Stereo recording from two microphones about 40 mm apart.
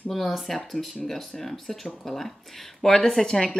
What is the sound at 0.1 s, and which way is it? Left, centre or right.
A woman's voice, centre.